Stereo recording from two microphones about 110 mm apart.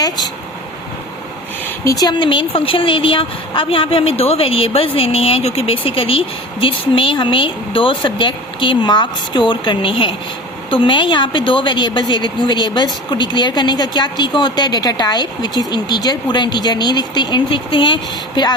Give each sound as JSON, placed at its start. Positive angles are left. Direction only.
{"t": 1.6, "sound": "a woman's voice", "side_deg": 30}